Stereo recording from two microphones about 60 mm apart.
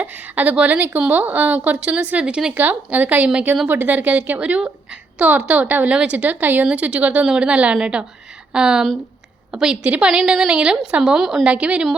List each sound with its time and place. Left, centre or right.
0.0 s a woman's voice: right
2.6 s a woman's voice: right; by 11.4 s centre
11.4 s a woman's voice: centre